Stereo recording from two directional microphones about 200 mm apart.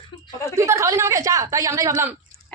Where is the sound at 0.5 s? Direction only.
15° right (ahead or behind).